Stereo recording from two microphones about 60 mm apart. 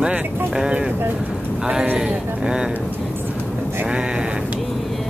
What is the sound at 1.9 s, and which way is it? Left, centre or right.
Speech, centre.